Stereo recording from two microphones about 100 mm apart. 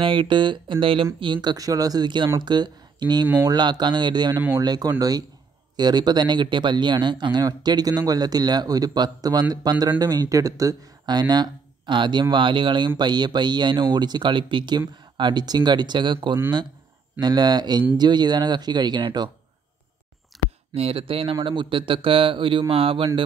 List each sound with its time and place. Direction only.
0.0 s speech: 55° right (ahead or behind)
1.2 s speech: 50° right (ahead or behind)
17.2 s speech: 45° right (ahead or behind)
20.3 s a sound: centre (ahead or behind)
20.7 s speech: 80° right